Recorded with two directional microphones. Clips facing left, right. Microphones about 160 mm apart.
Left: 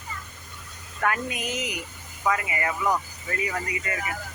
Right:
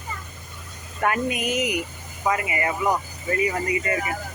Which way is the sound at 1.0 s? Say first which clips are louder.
Right 4 dB; 15° right (ahead or behind).